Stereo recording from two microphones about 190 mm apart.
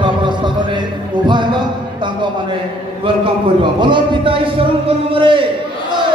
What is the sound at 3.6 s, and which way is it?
Speech, 25° right (ahead or behind).